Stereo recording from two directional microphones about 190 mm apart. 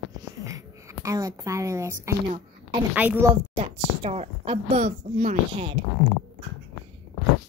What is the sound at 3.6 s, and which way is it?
Speech, 35° right (ahead or behind).